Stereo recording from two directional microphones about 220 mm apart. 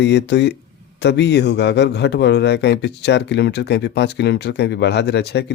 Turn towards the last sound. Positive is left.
turn(degrees=50)  # may be behind; listen again after turning